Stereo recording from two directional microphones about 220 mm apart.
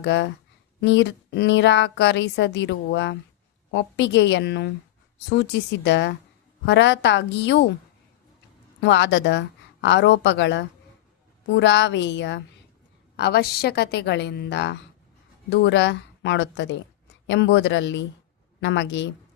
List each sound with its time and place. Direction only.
0.0 s a woman's voice: 50° left (ahead or behind)
8.8 s a woman's voice: 50° left (ahead or behind)